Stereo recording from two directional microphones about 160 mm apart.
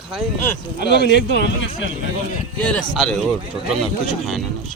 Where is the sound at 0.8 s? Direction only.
90° left.